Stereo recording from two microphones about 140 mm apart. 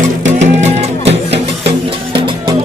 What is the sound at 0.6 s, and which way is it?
Music, 50° right (ahead or behind).